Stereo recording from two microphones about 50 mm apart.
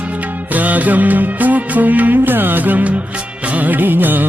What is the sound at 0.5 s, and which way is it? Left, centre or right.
Music, right.